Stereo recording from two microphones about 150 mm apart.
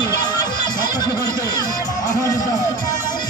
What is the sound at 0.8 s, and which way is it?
Music, 25° left (ahead or behind).